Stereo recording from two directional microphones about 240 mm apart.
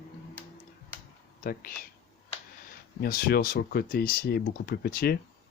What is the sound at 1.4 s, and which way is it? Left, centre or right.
Speech, left.